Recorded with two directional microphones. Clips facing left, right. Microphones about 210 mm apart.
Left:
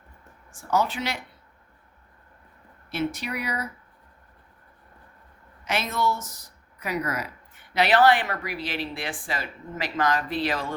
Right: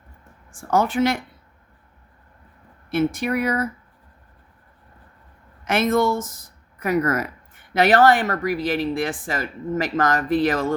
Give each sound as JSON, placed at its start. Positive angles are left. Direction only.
{"t": 0.5, "sound": "speech", "side_deg": -50}
{"t": 2.9, "sound": "speech", "side_deg": -50}
{"t": 5.6, "sound": "speech", "side_deg": -50}